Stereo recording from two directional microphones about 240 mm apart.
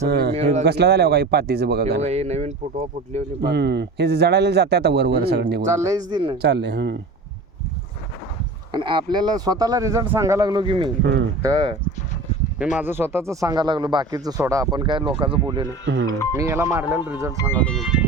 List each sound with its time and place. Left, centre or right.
0.1 s speech: right
2.0 s speech: right
3.4 s speech: right
5.6 s speech: centre
6.4 s speech: right
8.7 s speech: centre
11.0 s speech: right
11.4 s speech: centre
12.8 s speech: centre
16.0 s speech: centre
16.4 s speech: centre
17.3 s speech: centre